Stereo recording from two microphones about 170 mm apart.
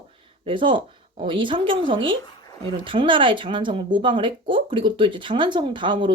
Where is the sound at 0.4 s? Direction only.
30° right (ahead or behind).